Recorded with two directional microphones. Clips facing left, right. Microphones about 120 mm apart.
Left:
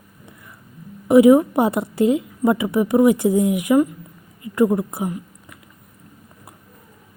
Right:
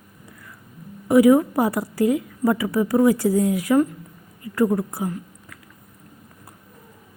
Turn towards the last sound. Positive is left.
turn(degrees=20)  # may be behind; listen again after turning